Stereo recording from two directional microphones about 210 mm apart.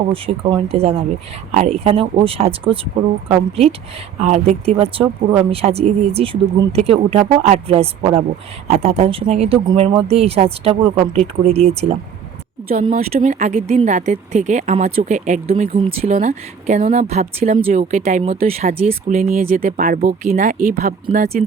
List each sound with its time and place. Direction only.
0.1 s speech: 25° right (ahead or behind)
13.0 s speech: 35° right (ahead or behind)
19.1 s speech: 40° right (ahead or behind)